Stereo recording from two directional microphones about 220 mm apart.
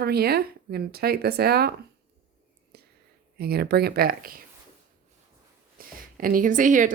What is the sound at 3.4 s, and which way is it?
Speech, 45° right (ahead or behind).